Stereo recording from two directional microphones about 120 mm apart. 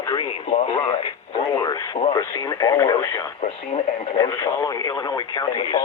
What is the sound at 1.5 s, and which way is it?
Speech, 30° left (ahead or behind).